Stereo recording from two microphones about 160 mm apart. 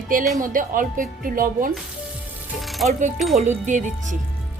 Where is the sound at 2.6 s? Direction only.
Centre (ahead or behind).